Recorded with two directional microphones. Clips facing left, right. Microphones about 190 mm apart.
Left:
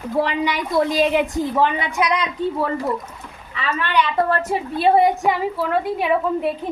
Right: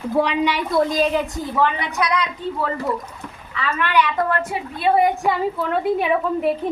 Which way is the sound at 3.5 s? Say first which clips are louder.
Right 1 dB; 30° left (ahead or behind).